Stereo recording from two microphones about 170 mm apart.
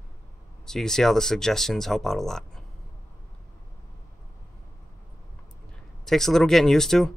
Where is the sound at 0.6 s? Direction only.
5° left (ahead or behind).